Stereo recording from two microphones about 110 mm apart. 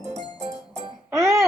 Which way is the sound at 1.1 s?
25° right (ahead or behind).